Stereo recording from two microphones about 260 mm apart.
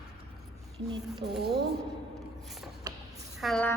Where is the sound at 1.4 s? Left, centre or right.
Right.